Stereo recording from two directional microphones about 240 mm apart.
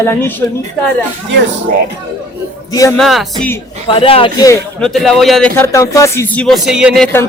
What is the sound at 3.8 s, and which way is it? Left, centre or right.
Speech, left.